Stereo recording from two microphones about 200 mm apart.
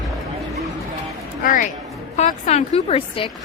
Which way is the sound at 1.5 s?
40° left (ahead or behind).